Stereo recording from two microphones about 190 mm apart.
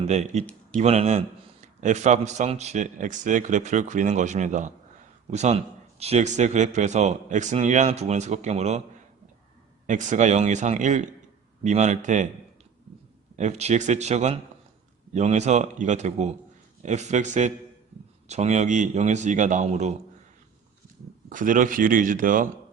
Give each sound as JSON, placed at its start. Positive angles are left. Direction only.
{"t": 0.0, "sound": "a man's voice", "side_deg": -35}
{"t": 9.8, "sound": "a man's voice", "side_deg": -40}
{"t": 13.3, "sound": "a man's voice", "side_deg": -35}
{"t": 21.2, "sound": "speech", "side_deg": -45}